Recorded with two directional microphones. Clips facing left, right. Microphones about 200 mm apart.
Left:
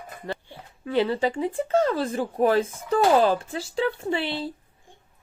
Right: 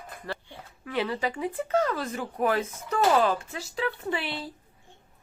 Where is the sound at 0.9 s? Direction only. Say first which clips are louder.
Left 6 dB; 30° left (ahead or behind).